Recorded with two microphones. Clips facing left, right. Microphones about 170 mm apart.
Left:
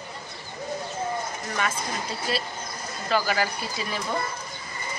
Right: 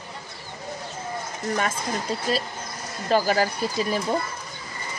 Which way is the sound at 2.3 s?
40° right (ahead or behind).